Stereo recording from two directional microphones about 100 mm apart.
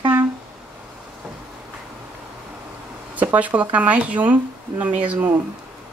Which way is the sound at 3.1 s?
15° right (ahead or behind).